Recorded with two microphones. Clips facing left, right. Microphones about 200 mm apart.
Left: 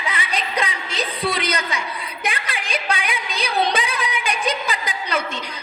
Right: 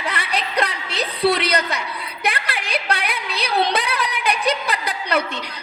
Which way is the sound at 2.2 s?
65° right (ahead or behind).